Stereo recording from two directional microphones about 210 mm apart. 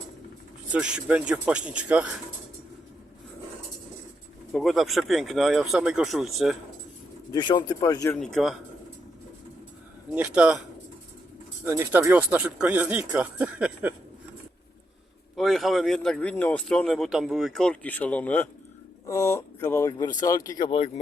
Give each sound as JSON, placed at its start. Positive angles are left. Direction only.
{"t": 0.7, "sound": "speech", "side_deg": -5}
{"t": 4.5, "sound": "speech", "side_deg": 0}
{"t": 7.3, "sound": "speech", "side_deg": 20}
{"t": 8.2, "sound": "speech", "side_deg": 0}
{"t": 10.2, "sound": "speech", "side_deg": -5}
{"t": 11.6, "sound": "speech", "side_deg": -10}
{"t": 15.4, "sound": "speech", "side_deg": 0}
{"t": 20.7, "sound": "speech", "side_deg": 25}